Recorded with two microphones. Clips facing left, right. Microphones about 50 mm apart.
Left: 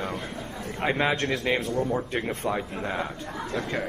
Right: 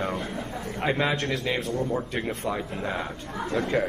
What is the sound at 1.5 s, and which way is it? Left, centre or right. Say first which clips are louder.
Speech: left 3 dB; left.